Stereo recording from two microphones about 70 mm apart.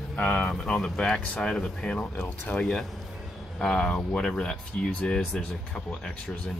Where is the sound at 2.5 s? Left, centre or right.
Centre.